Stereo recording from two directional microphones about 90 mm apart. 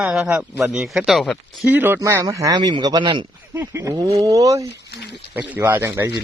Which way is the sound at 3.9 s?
40° right (ahead or behind).